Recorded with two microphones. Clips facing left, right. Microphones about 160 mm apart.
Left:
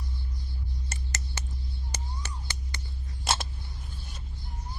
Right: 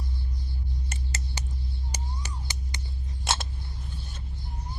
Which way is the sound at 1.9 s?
15° right (ahead or behind).